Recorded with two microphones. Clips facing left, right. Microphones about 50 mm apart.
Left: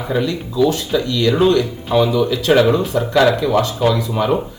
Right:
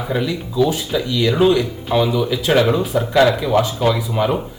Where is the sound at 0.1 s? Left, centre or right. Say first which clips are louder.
Left 3 dB; centre.